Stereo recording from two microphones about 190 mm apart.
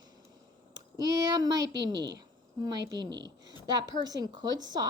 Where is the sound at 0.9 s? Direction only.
20° right (ahead or behind).